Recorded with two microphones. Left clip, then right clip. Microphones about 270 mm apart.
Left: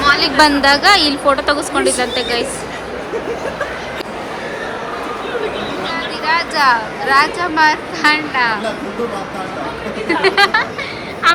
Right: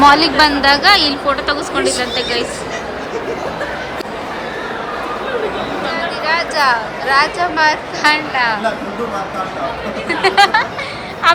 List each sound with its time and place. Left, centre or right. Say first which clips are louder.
0.0 s a woman's voice: right 2 dB; centre
6.2 s a woman's voice: left 1 dB; centre
10.1 s speech: right 1 dB; centre